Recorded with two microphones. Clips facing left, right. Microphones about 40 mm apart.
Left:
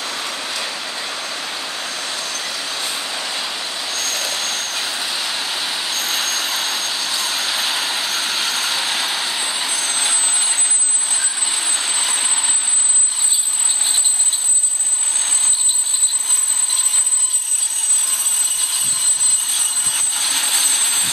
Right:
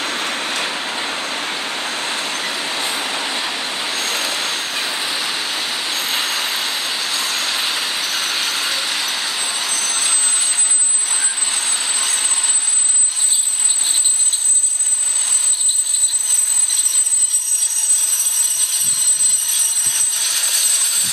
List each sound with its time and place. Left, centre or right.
0.0 s vehicle: right; by 8.7 s centre
8.7 s vehicle: centre
9.6 s vehicle: left
11.6 s vehicle: left
17.7 s a sound: left
19.4 s jet engine: left